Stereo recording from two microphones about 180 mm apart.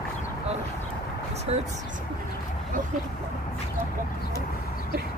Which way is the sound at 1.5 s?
35° right (ahead or behind).